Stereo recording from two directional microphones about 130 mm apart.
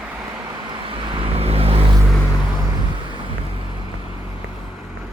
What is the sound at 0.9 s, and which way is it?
Vehicle, 40° right (ahead or behind).